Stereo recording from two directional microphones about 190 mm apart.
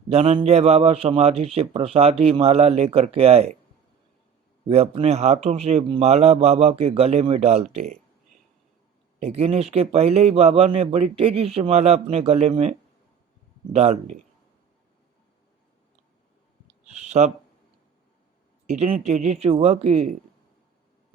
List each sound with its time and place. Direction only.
0.1 s a man's voice: 30° right (ahead or behind)
4.7 s a man's voice: 30° right (ahead or behind)
9.2 s a man's voice: 35° right (ahead or behind)
13.7 s a man's voice: 35° right (ahead or behind)
16.6 s clicking: 35° right (ahead or behind)
18.7 s a man's voice: 35° right (ahead or behind)